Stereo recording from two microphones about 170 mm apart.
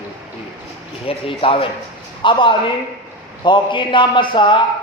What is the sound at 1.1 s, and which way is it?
A man's voice, 30° left (ahead or behind).